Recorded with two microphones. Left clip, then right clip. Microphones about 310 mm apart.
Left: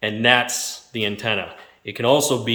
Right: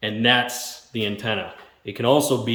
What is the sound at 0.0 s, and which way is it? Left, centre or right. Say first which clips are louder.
Speech: left 2 dB; centre.